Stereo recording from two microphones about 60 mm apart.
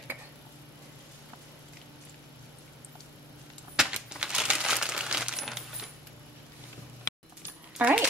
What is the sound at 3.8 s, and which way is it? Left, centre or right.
Crumpling, centre.